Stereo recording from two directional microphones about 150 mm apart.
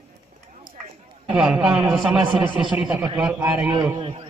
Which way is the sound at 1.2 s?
5° right (ahead or behind).